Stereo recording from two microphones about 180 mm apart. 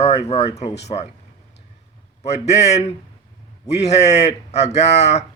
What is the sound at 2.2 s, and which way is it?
A man's voice, 35° left (ahead or behind).